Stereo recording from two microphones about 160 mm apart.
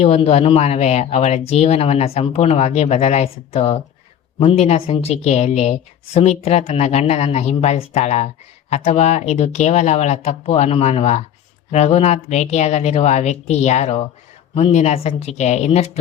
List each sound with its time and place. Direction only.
0.0 s a woman's voice: 40° left (ahead or behind)